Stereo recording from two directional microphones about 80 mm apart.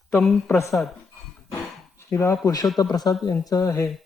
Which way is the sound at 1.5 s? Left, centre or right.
Left.